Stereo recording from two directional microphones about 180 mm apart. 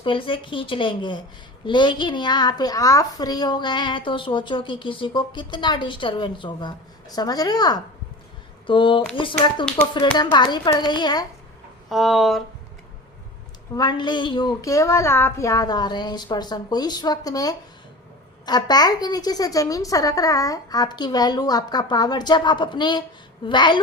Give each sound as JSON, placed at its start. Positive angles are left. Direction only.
{"t": 0.0, "sound": "a child's voice", "side_deg": 30}
{"t": 11.9, "sound": "speech", "side_deg": 0}
{"t": 13.7, "sound": "a child's voice", "side_deg": 25}